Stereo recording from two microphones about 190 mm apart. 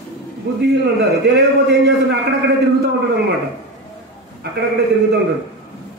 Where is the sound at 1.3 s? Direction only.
65° right (ahead or behind).